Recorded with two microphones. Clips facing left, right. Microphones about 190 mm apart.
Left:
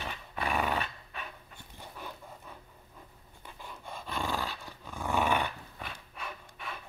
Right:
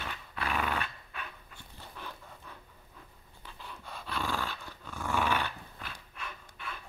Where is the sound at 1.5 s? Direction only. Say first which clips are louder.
Left 2 dB; 15° left (ahead or behind).